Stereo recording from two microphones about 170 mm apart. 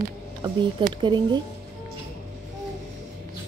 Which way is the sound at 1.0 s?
25° right (ahead or behind).